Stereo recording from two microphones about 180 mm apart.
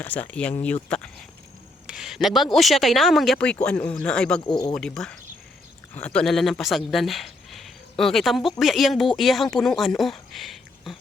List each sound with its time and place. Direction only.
0.0 s speech: 10° left (ahead or behind)
4.4 s speech: 20° left (ahead or behind)
4.7 s speech: 5° left (ahead or behind)